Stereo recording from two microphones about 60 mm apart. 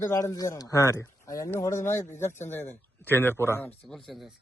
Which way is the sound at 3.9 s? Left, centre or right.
Centre.